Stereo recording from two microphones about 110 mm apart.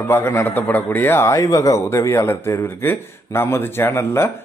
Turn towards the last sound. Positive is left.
turn(degrees=25)  # may be behind; listen again after turning